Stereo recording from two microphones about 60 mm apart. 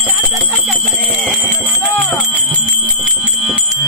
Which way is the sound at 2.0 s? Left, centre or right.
Left.